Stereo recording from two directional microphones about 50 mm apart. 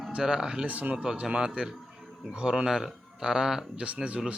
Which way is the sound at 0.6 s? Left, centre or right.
Right.